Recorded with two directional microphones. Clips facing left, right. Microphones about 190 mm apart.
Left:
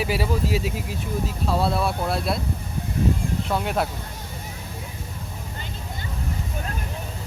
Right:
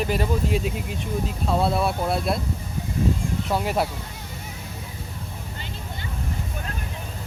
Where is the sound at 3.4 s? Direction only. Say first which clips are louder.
Right 1 dB; centre (ahead or behind).